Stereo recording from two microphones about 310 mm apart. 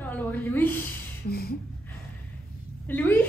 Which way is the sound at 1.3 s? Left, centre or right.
Left.